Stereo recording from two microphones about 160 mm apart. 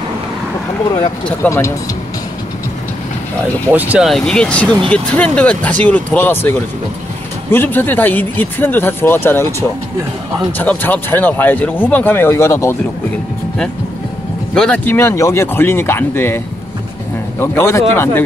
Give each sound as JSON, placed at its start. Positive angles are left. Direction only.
{"t": 0.9, "sound": "speech", "side_deg": 20}
{"t": 3.7, "sound": "speech", "side_deg": -10}
{"t": 4.1, "sound": "speech", "side_deg": 5}
{"t": 14.5, "sound": "speech", "side_deg": 5}
{"t": 17.4, "sound": "speech", "side_deg": 15}